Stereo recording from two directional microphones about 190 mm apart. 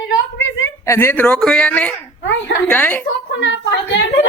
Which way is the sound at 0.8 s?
15° left (ahead or behind).